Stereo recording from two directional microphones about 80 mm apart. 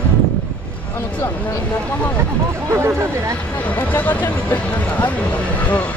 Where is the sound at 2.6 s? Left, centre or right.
Right.